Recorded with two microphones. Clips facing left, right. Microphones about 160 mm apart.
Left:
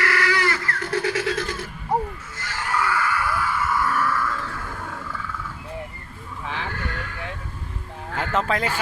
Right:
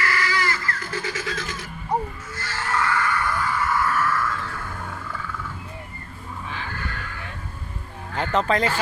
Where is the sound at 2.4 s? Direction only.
15° left (ahead or behind).